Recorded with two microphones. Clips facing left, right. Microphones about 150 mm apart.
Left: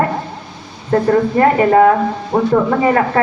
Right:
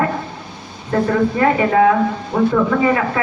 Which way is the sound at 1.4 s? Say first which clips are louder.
Left 4 dB; 40° left (ahead or behind).